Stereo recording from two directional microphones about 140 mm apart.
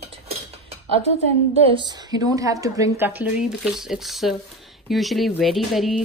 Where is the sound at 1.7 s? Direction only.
30° right (ahead or behind).